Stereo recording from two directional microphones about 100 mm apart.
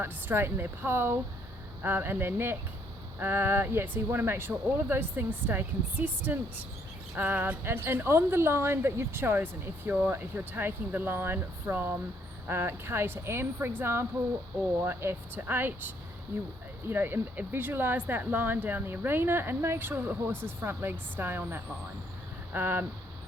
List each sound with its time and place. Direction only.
0.0 s speech: 20° right (ahead or behind)
16.9 s speech: 20° right (ahead or behind)